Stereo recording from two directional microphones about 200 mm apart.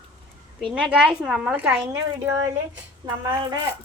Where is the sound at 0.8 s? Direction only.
5° right (ahead or behind).